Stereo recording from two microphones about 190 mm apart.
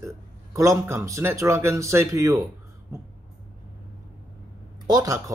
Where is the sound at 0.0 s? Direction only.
15° right (ahead or behind).